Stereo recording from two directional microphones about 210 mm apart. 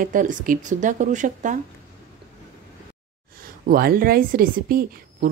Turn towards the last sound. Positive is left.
turn(degrees=-45)  # may be behind; listen again after turning